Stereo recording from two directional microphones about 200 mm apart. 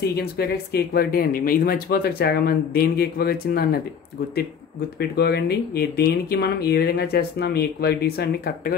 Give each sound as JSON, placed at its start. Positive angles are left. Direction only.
{"t": 0.1, "sound": "speech", "side_deg": 50}
{"t": 4.9, "sound": "speech", "side_deg": 55}